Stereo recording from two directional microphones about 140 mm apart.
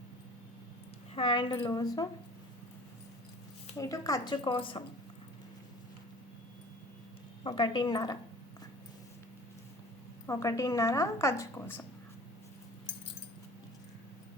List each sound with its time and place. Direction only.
1.1 s a woman's voice: 40° left (ahead or behind)
3.8 s a woman's voice: 25° left (ahead or behind)
7.4 s a woman's voice: 35° left (ahead or behind)
10.2 s a woman's voice: 25° left (ahead or behind)